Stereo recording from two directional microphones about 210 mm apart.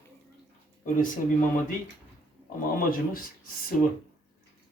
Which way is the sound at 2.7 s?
40° left (ahead or behind).